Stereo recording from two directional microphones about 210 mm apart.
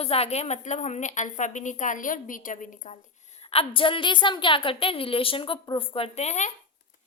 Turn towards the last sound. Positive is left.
turn(degrees=30)  # may be behind; listen again after turning